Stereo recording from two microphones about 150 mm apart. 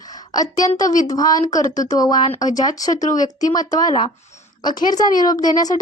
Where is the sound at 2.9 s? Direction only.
55° left (ahead or behind).